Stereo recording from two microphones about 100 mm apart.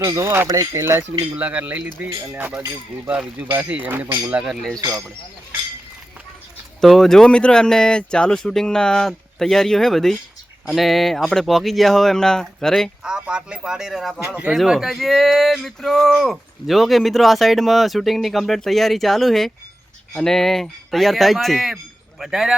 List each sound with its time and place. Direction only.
0.0 s speech: 30° right (ahead or behind)
1.4 s speech: 15° right (ahead or behind)
6.8 s speech: 5° left (ahead or behind)
13.0 s speech: 10° right (ahead or behind)
14.3 s speech: 15° right (ahead or behind)
14.5 s speech: centre (ahead or behind)